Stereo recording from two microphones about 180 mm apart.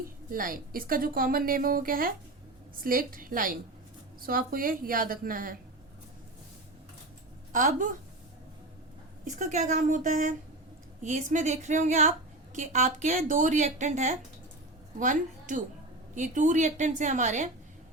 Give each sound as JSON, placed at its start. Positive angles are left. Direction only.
{"t": 0.3, "sound": "a woman's voice", "side_deg": -50}
{"t": 7.5, "sound": "a woman's voice", "side_deg": -45}
{"t": 9.2, "sound": "a woman's voice", "side_deg": -45}